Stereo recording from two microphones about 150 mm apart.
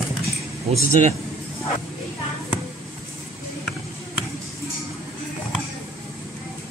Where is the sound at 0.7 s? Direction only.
50° right (ahead or behind).